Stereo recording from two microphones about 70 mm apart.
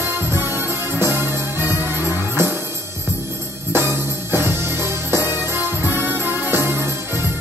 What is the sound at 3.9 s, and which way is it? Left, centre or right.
Music, right.